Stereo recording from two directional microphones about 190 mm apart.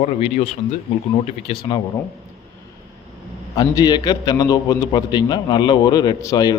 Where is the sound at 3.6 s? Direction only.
20° left (ahead or behind).